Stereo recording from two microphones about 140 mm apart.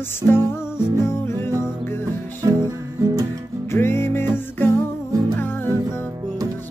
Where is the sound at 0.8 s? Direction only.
30° right (ahead or behind).